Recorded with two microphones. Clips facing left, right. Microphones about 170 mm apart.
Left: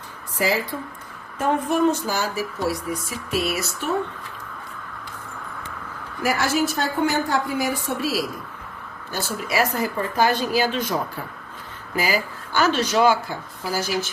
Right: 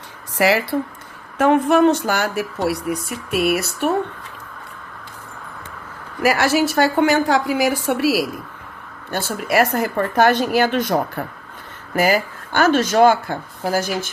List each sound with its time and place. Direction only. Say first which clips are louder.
0.3 s a woman's voice: right 6 dB; 80° right; by 3.9 s 60° right (ahead or behind)
6.2 s a woman's voice: right 5 dB; 75° right (ahead or behind)
9.1 s speech: right 5 dB; 55° right (ahead or behind)